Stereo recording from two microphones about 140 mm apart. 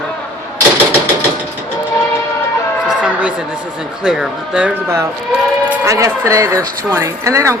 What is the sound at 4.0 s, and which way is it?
Speech, 5° right (ahead or behind).